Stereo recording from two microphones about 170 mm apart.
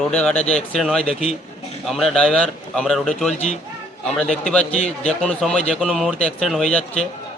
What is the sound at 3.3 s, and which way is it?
Speech, 40° left (ahead or behind).